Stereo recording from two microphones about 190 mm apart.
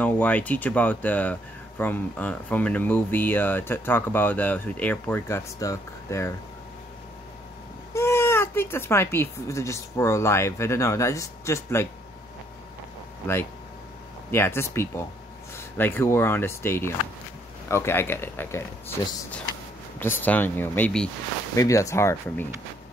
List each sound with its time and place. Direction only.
0.0 s speech: 5° left (ahead or behind)
7.9 s speech: 15° left (ahead or behind)
14.3 s speech: 10° left (ahead or behind)